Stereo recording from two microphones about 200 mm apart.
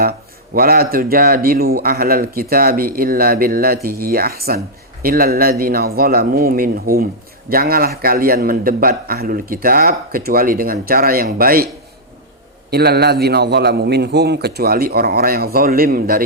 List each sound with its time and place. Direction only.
0.5 s a man's voice: 45° right (ahead or behind)
12.7 s a man's voice: 55° right (ahead or behind)